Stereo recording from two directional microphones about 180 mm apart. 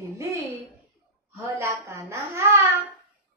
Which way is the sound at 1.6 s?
15° right (ahead or behind).